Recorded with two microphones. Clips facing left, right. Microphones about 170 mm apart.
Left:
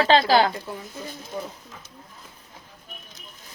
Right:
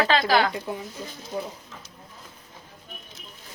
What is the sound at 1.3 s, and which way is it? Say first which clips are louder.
Speech: right 2 dB; 20° right (ahead or behind).